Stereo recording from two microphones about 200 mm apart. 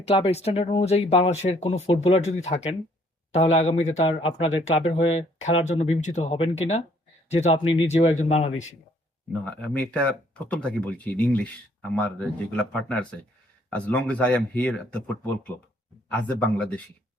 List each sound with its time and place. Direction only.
0.1 s speech: 30° left (ahead or behind)
9.4 s speech: 5° left (ahead or behind)